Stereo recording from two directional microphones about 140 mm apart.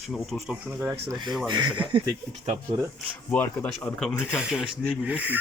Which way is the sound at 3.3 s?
10° left (ahead or behind).